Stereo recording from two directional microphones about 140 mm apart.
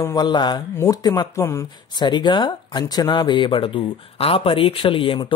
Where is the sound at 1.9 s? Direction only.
30° left (ahead or behind).